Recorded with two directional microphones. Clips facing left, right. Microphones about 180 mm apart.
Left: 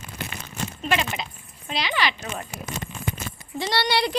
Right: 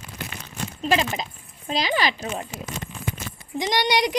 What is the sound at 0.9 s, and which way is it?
Speech, 35° right (ahead or behind).